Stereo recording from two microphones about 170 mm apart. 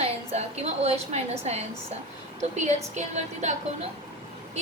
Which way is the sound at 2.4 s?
40° right (ahead or behind).